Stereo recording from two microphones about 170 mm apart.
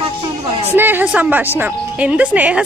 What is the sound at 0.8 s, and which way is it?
A woman's voice, 10° right (ahead or behind).